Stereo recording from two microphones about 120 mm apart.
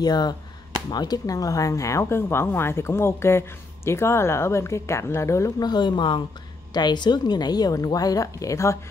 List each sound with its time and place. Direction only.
0.0 s speech: 35° left (ahead or behind)